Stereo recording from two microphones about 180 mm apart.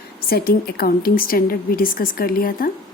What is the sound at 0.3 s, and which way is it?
A woman's voice, 60° left (ahead or behind).